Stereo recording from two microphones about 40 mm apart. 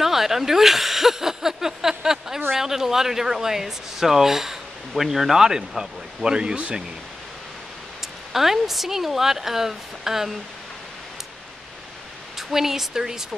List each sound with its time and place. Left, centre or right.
0.0 s a sound: centre
2.6 s speech: centre
5.6 s speech: right
8.3 s speech: centre
12.4 s speech: centre